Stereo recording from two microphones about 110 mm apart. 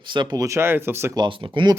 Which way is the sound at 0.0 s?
45° right (ahead or behind).